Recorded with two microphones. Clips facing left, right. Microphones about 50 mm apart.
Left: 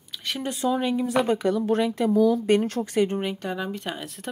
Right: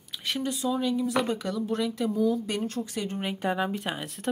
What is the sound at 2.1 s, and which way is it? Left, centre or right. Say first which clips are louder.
Speech: left 7 dB; left.